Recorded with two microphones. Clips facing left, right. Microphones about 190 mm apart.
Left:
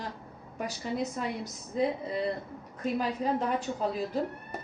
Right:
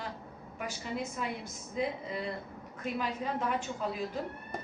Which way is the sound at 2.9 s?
35° left (ahead or behind).